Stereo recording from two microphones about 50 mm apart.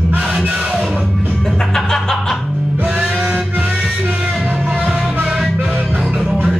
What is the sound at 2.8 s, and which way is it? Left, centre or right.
Music, right.